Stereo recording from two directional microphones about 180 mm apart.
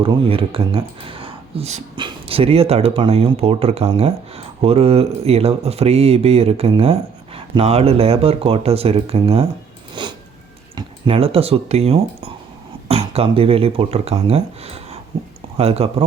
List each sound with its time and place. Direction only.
0.0 s speech: 30° right (ahead or behind)
9.9 s a sound: 25° right (ahead or behind)
10.8 s speech: 30° right (ahead or behind)